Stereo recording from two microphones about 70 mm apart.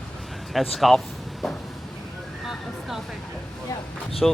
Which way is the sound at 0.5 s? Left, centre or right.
Centre.